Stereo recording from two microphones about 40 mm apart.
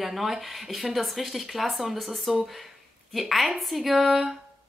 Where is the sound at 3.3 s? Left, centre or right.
Centre.